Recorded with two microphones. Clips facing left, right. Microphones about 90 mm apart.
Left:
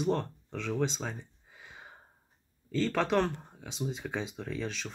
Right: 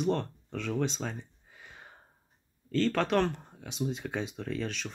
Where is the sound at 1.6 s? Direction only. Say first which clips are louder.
Left 1 dB; 10° left (ahead or behind).